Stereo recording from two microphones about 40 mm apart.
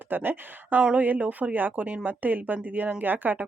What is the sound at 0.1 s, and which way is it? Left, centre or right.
Speech, right.